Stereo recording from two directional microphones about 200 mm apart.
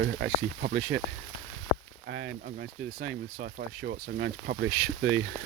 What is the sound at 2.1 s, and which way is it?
Speech, 50° right (ahead or behind).